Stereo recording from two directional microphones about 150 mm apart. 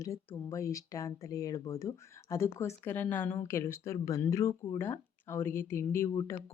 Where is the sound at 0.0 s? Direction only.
20° left (ahead or behind).